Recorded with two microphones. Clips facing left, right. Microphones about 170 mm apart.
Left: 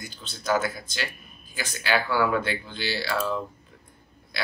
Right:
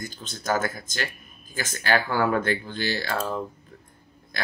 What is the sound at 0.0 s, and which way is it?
Speech, 45° right (ahead or behind).